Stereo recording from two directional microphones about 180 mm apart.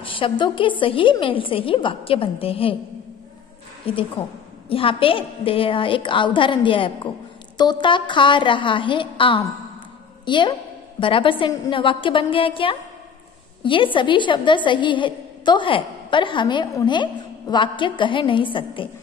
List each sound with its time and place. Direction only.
0.0 s a woman's voice: 30° left (ahead or behind)
3.9 s a woman's voice: 30° left (ahead or behind)